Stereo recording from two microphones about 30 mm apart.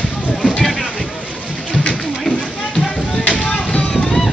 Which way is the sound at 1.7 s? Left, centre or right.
Left.